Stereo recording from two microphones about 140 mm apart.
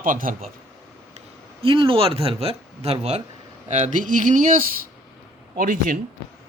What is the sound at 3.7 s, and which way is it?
Speech, 60° right (ahead or behind).